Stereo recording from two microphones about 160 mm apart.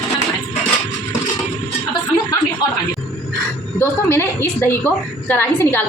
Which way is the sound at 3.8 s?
15° left (ahead or behind).